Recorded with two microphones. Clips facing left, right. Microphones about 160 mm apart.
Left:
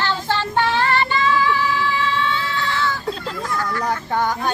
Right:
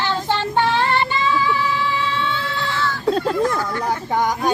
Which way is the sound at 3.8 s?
10° right (ahead or behind).